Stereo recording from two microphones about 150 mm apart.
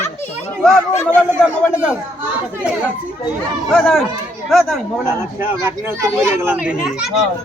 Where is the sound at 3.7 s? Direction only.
5° left (ahead or behind).